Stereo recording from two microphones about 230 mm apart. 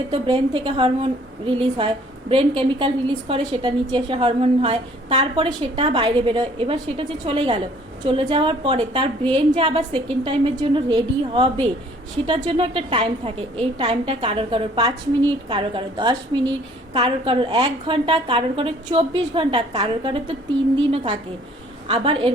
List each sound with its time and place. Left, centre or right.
0.1 s a woman's voice: right